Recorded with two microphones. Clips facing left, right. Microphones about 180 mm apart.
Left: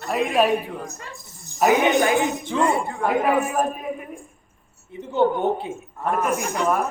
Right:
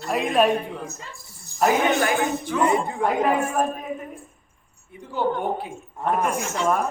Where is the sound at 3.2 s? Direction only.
10° left (ahead or behind).